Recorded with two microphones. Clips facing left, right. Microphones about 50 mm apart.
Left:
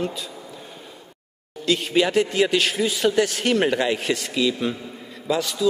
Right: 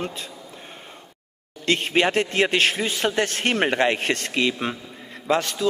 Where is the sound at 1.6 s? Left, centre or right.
Right.